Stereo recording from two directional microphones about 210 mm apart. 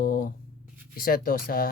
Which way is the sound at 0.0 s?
45° left (ahead or behind).